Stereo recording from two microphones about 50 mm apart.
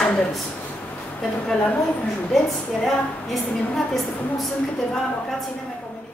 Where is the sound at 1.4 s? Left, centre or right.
Centre.